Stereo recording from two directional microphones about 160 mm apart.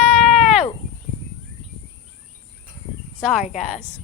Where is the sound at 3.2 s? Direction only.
5° right (ahead or behind).